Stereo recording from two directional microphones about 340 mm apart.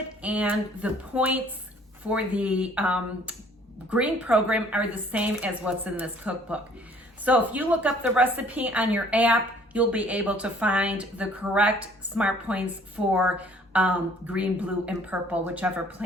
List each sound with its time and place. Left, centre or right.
0.2 s a woman's voice: centre